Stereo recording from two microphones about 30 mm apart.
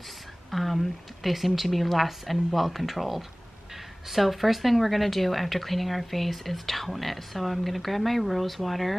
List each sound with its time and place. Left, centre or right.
0.5 s speech: centre